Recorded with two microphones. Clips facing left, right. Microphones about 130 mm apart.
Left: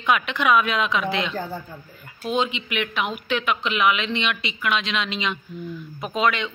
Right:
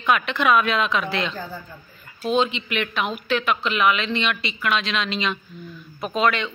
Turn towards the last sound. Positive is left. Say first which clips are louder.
# right 1 dB
turn(degrees=15)  # may be behind; listen again after turning